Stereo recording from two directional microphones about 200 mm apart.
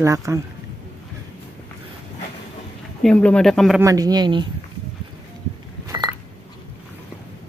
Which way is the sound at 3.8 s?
20° right (ahead or behind).